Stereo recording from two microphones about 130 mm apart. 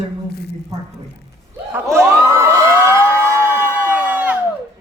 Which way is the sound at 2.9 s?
20° right (ahead or behind).